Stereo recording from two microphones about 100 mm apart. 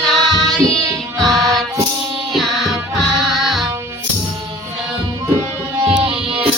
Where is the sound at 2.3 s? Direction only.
5° right (ahead or behind).